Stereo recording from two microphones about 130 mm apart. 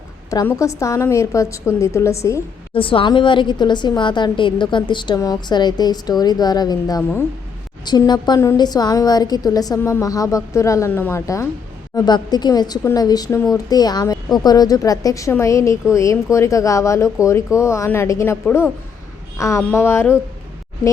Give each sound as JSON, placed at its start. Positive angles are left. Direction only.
{"t": 0.6, "sound": "a woman's voice", "side_deg": 25}
{"t": 2.7, "sound": "a woman's voice", "side_deg": 45}
{"t": 11.9, "sound": "a woman's voice", "side_deg": 35}